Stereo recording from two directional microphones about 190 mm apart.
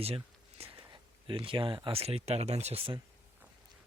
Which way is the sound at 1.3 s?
25° right (ahead or behind).